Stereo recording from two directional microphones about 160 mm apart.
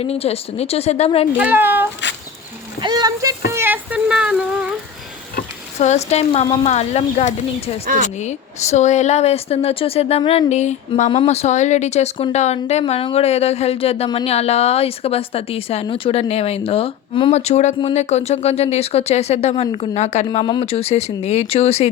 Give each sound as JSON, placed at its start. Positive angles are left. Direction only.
{"t": 0.0, "sound": "speech", "side_deg": 40}
{"t": 1.4, "sound": "speech", "side_deg": -10}
{"t": 2.8, "sound": "a sound", "side_deg": -25}
{"t": 3.5, "sound": "a sound", "side_deg": -15}
{"t": 5.4, "sound": "a sound", "side_deg": 45}
{"t": 6.7, "sound": "a woman's voice", "side_deg": 40}
{"t": 11.1, "sound": "a woman's voice", "side_deg": 35}
{"t": 12.8, "sound": "a woman's voice", "side_deg": 35}
{"t": 20.4, "sound": "speech", "side_deg": 30}